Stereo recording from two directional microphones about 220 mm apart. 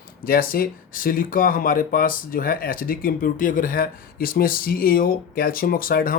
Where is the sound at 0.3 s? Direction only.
40° left (ahead or behind).